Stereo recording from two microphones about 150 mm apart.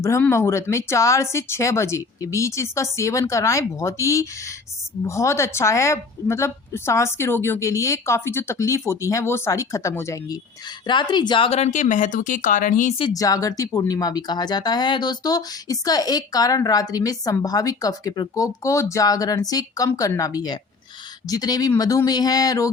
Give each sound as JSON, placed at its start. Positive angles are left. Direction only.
{"t": 0.0, "sound": "speech", "side_deg": 20}
{"t": 10.8, "sound": "speech", "side_deg": 30}
{"t": 11.7, "sound": "speech", "side_deg": 60}
{"t": 13.0, "sound": "speech", "side_deg": 25}